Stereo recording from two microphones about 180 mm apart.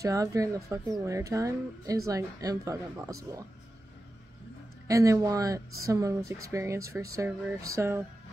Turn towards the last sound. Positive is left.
turn(degrees=-15)  # may be behind; listen again after turning